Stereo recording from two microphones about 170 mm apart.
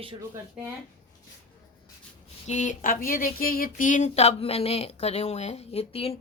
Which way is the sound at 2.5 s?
45° left (ahead or behind).